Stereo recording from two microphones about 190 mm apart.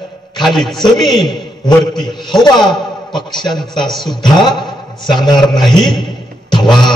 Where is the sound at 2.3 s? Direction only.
20° left (ahead or behind).